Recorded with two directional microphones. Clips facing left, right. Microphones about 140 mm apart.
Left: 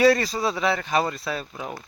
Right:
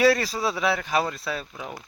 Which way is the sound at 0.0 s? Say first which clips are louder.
Left 2 dB; 5° right (ahead or behind).